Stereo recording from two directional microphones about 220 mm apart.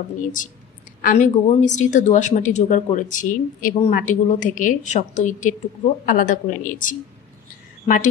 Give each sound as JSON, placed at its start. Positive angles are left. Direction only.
{"t": 1.0, "sound": "a woman's voice", "side_deg": 35}